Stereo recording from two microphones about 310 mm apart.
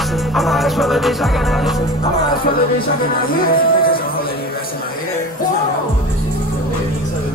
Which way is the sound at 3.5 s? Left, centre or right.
Left.